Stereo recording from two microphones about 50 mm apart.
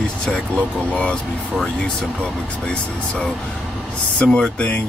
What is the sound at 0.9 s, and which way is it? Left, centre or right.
Speech, left.